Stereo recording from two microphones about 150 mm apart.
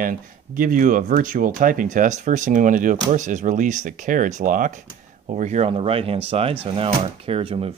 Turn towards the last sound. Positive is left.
turn(degrees=-40)  # may be behind; listen again after turning